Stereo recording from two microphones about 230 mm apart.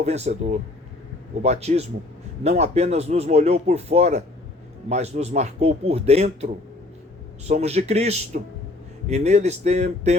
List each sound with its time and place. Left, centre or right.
0.0 s speech: right